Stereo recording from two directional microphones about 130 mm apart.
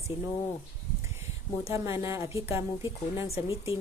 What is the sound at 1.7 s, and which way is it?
Speech, 20° right (ahead or behind).